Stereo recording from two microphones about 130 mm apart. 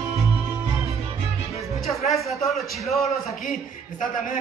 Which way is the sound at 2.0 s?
Centre (ahead or behind).